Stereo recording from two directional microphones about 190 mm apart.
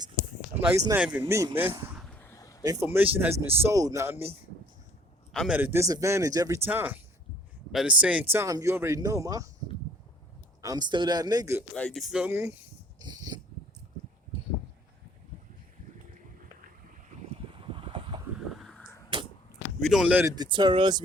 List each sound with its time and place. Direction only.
0.9 s speech: 5° right (ahead or behind)
1.2 s speech: 20° right (ahead or behind)
2.0 s a sound: 5° left (ahead or behind)
2.6 s speech: 10° right (ahead or behind)
5.3 s a man's voice: centre (ahead or behind)
5.5 s speech: 10° right (ahead or behind)
10.6 s speech: 20° right (ahead or behind)
11.7 s speech: 5° left (ahead or behind); by 12.5 s 15° right (ahead or behind)
13.0 s a sound: 20° right (ahead or behind)
17.1 s boat: 35° right (ahead or behind)
18.3 s a sound: centre (ahead or behind)
19.8 s speech: centre (ahead or behind)
20.3 s speech: 20° right (ahead or behind)